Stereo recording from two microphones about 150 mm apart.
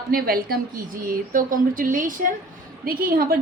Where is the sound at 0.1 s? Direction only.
75° right (ahead or behind).